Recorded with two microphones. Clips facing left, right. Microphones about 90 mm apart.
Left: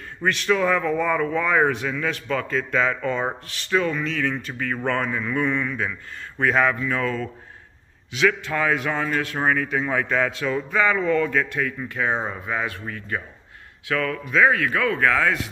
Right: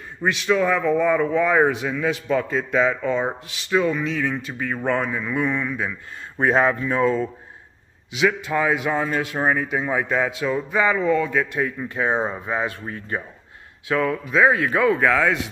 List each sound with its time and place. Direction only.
0.2 s speech: 5° right (ahead or behind)
6.4 s speech: 30° right (ahead or behind); by 11.4 s 10° right (ahead or behind)
11.5 s speech: 25° right (ahead or behind); by 15.4 s 5° right (ahead or behind)